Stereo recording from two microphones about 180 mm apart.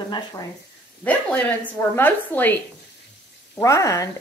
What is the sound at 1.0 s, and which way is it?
Speech, 10° left (ahead or behind).